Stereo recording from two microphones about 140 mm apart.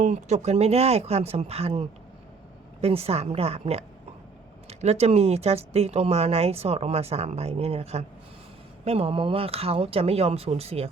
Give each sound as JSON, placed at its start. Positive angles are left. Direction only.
{"t": 0.0, "sound": "speech", "side_deg": -55}